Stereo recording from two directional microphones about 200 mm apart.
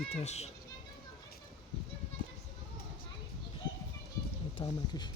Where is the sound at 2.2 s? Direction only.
25° right (ahead or behind).